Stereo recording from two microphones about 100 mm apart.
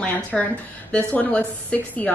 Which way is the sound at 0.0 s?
15° left (ahead or behind).